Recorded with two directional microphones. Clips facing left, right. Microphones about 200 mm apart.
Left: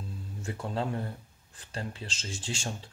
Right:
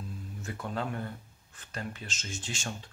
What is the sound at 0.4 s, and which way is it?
Speech, 30° left (ahead or behind).